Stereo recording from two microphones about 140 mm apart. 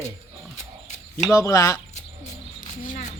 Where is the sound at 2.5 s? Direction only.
70° left (ahead or behind).